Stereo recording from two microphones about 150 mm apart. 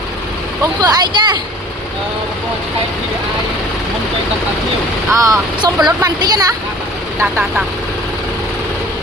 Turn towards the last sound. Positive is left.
turn(degrees=-5)  # may be behind; listen again after turning